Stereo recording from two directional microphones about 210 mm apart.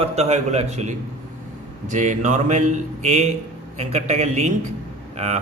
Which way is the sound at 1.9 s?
35° right (ahead or behind).